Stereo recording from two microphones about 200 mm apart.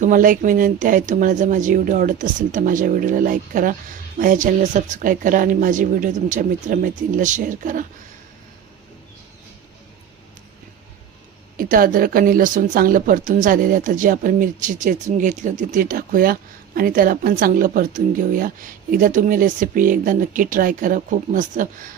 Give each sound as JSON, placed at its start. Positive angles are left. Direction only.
{"t": 0.0, "sound": "speech", "side_deg": -40}
{"t": 11.5, "sound": "speech", "side_deg": -45}